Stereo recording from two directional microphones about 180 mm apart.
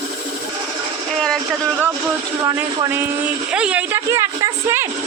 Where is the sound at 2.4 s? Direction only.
20° right (ahead or behind).